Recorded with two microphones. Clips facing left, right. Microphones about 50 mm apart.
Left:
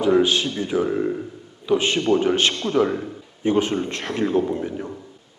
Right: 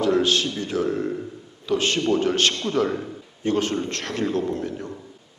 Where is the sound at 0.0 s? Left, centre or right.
Centre.